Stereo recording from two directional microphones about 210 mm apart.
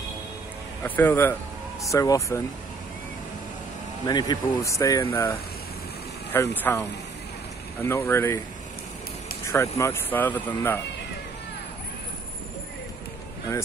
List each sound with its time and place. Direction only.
0.8 s speech: 10° left (ahead or behind)
4.0 s speech: 20° left (ahead or behind)
9.5 s speech: 15° left (ahead or behind)